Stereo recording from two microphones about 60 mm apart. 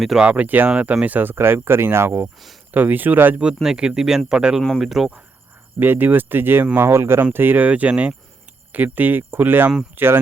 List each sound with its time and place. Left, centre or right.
0.2 s speech: right
2.7 s speech: right
3.6 s speech: centre
5.8 s speech: right
7.3 s speech: right